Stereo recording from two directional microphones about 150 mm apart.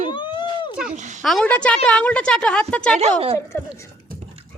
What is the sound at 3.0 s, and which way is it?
Speech, 40° right (ahead or behind).